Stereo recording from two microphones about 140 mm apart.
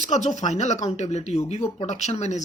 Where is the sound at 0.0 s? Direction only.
60° left (ahead or behind).